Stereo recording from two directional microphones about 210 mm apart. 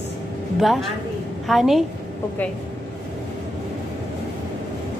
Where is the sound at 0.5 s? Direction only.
Centre (ahead or behind).